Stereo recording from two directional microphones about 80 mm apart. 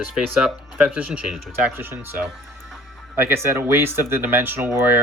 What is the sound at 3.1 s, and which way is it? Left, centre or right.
Speech, right.